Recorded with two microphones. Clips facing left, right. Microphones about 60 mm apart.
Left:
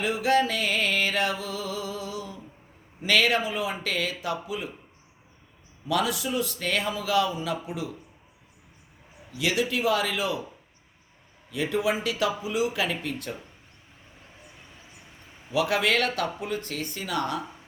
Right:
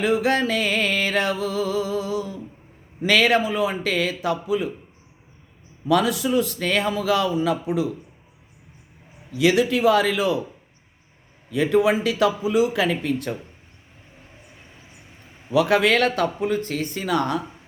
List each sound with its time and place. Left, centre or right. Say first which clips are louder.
0.0 s music: right 3 dB; right
3.0 s speech: right 5 dB; right
5.9 s speech: right 7 dB; right
9.4 s speech: right 8 dB; right
11.5 s speech: right 7 dB; right
15.5 s speech: right 6 dB; right